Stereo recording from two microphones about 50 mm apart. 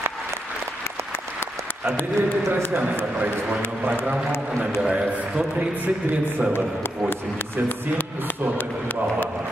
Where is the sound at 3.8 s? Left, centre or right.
Right.